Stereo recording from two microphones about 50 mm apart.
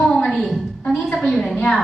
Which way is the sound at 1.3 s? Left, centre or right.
Centre.